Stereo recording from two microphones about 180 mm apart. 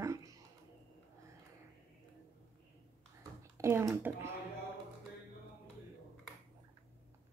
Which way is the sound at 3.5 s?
15° right (ahead or behind).